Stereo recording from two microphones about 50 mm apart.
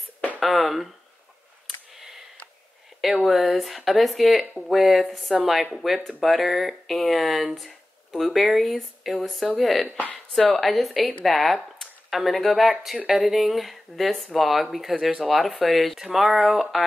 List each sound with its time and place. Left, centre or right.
0.4 s speech: centre
2.0 s a sound: centre
3.3 s speech: centre
9.8 s speech: left
10.5 s speech: centre